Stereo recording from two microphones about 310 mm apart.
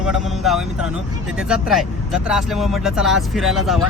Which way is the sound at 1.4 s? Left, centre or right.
Centre.